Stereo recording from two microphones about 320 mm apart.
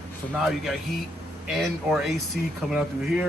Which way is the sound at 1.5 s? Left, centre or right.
Centre.